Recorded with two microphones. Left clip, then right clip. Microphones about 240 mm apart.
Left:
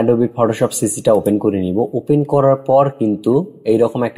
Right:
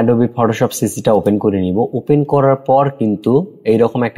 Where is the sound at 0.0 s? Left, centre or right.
Right.